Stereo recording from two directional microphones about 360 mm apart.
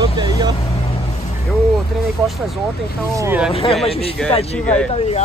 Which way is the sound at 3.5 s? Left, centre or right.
Centre.